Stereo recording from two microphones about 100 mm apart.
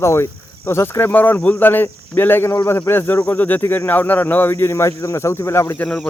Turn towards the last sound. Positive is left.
turn(degrees=25)  # may be behind; listen again after turning